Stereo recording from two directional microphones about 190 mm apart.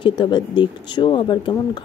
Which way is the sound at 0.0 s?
25° left (ahead or behind).